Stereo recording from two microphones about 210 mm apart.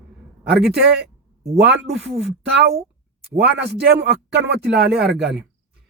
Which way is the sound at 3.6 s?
55° right (ahead or behind).